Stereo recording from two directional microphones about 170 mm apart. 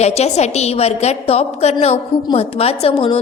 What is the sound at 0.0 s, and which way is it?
A woman's voice, 40° left (ahead or behind).